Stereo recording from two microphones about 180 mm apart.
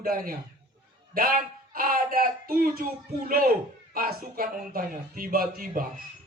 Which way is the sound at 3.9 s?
55° right (ahead or behind).